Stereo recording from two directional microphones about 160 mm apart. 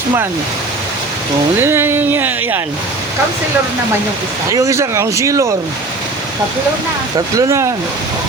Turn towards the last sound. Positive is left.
turn(degrees=-20)  # may be behind; listen again after turning